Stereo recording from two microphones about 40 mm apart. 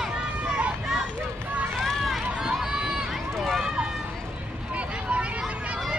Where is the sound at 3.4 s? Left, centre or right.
Centre.